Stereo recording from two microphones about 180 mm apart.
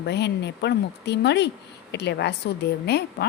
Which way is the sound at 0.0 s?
70° left (ahead or behind).